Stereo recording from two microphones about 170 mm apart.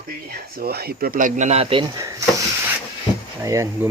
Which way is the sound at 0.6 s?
65° right (ahead or behind).